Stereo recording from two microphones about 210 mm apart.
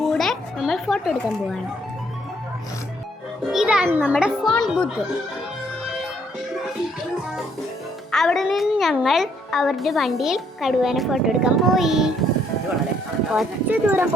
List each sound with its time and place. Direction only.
0.0 s children playing: centre (ahead or behind)
3.5 s a child's voice: 5° right (ahead or behind)
8.1 s a child's voice: centre (ahead or behind)
13.3 s speech: 10° right (ahead or behind)